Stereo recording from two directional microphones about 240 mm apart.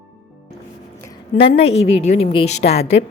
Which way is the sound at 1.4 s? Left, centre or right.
Left.